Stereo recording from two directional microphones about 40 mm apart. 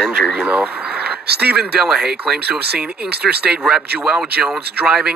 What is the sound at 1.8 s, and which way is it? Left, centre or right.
Speech, centre.